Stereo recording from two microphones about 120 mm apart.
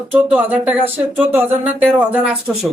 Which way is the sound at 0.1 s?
15° right (ahead or behind).